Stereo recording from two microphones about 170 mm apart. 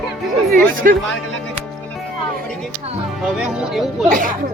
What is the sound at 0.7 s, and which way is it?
Speech, 55° right (ahead or behind).